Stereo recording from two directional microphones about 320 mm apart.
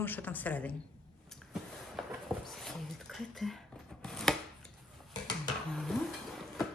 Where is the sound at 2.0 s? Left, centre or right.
Centre.